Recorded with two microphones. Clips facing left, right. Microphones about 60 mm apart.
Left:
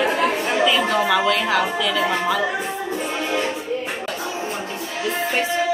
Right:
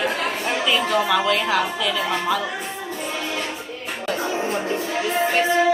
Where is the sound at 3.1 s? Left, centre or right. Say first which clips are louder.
Left 4 dB; left.